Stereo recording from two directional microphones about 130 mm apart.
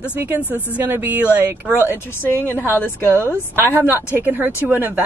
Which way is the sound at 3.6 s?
15° right (ahead or behind).